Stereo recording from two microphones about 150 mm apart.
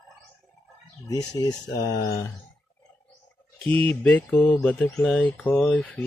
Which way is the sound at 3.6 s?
10° left (ahead or behind).